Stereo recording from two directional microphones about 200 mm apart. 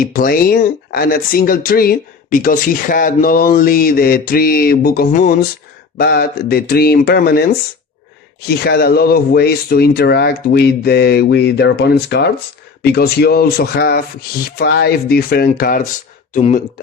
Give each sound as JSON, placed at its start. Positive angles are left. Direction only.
{"t": 0.0, "sound": "speech", "side_deg": 45}
{"t": 8.4, "sound": "speech", "side_deg": 50}